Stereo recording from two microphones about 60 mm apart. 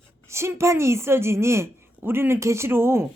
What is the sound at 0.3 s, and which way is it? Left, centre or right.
A woman's voice, right.